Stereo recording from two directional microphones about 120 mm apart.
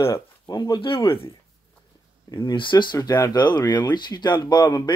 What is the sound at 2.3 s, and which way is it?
Speech, 40° left (ahead or behind).